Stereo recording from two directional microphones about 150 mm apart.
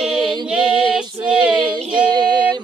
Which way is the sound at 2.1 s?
30° right (ahead or behind).